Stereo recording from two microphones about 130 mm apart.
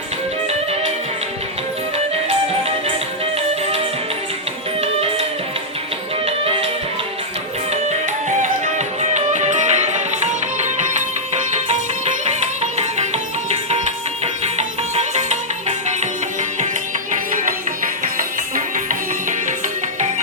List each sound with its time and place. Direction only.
0.4 s music: 55° right (ahead or behind)
4.8 s music: 50° right (ahead or behind)
6.2 s music: 50° right (ahead or behind)
9.0 s music: 60° right (ahead or behind)
14.4 s music: 60° right (ahead or behind)
18.0 s music: 90° right